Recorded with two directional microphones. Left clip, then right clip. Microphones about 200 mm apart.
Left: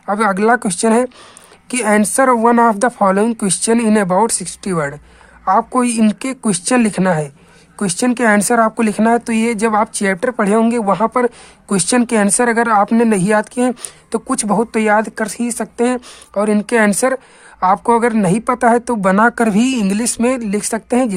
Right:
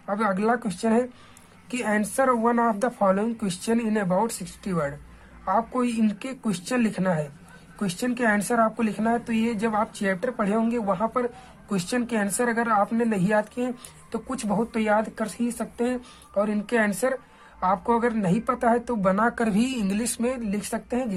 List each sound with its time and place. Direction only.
0.0 s speech: 40° left (ahead or behind)